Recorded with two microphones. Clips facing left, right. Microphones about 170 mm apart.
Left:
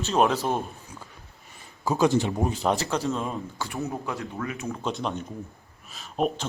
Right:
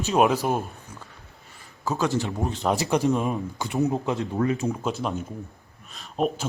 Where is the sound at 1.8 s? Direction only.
15° left (ahead or behind).